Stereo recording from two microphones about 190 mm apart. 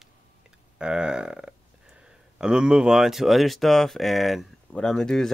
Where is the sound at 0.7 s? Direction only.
5° right (ahead or behind).